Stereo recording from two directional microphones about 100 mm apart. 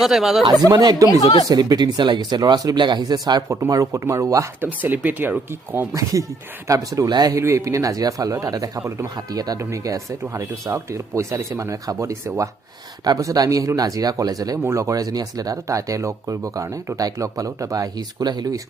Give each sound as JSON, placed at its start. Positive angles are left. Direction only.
{"t": 0.0, "sound": "speech", "side_deg": -5}
{"t": 0.7, "sound": "speech", "side_deg": -45}
{"t": 3.5, "sound": "speech", "side_deg": -35}
{"t": 4.8, "sound": "speech", "side_deg": -20}
{"t": 6.7, "sound": "speech", "side_deg": -35}
{"t": 9.6, "sound": "speech", "side_deg": -30}